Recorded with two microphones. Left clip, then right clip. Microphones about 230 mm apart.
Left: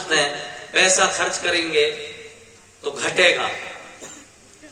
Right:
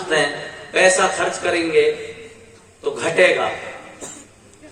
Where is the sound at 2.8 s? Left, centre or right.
Left.